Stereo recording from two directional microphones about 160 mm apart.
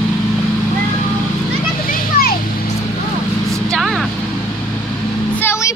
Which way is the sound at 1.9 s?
65° left (ahead or behind).